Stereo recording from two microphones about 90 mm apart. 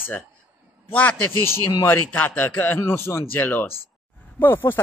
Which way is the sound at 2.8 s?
30° left (ahead or behind).